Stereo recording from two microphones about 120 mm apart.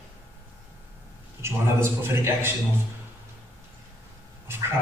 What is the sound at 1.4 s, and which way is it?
A man's voice, 20° right (ahead or behind).